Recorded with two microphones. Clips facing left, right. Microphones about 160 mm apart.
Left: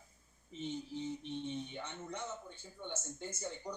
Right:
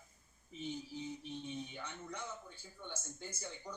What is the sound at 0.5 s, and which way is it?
Speech, 5° right (ahead or behind).